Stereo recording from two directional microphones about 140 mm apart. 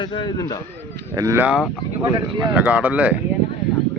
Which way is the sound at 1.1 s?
25° right (ahead or behind).